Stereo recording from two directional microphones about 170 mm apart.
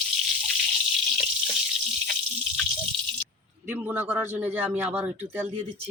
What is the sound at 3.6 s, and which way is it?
Speech, 10° right (ahead or behind).